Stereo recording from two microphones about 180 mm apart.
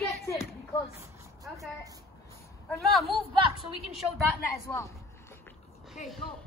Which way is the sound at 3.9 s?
Centre (ahead or behind).